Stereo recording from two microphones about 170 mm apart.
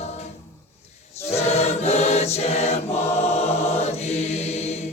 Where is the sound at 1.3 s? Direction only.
40° left (ahead or behind).